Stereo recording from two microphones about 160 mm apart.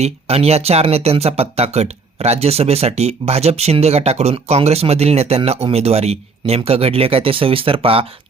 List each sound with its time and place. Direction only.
0.0 s speech: 40° right (ahead or behind)